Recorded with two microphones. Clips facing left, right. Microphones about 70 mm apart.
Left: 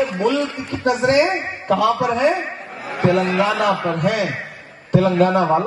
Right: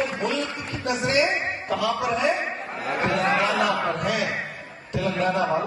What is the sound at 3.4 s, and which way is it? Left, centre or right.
A man's voice, left.